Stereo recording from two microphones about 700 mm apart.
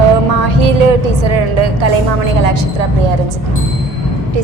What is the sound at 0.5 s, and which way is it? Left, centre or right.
A woman's voice, right.